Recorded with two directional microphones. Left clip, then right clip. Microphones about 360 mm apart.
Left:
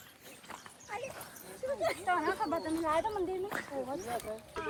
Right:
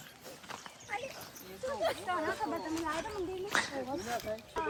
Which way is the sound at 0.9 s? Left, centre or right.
Centre.